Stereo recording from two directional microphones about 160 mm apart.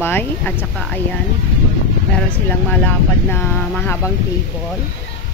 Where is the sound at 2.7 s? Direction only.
10° left (ahead or behind).